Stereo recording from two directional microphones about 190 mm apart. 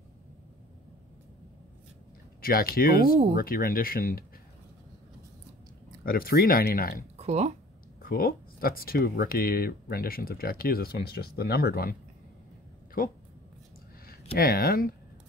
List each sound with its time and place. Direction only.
2.4 s speech: 50° left (ahead or behind)
6.0 s speech: 50° left (ahead or behind)
7.2 s speech: 35° right (ahead or behind)
8.0 s speech: 50° left (ahead or behind)
14.3 s speech: 50° left (ahead or behind)